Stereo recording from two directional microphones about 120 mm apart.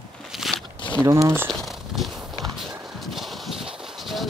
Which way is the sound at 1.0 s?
25° right (ahead or behind).